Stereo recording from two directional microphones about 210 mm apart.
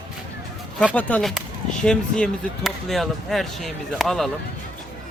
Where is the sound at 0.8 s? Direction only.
5° left (ahead or behind).